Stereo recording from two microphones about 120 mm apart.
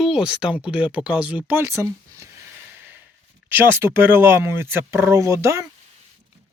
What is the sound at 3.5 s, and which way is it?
Speech, 20° right (ahead or behind).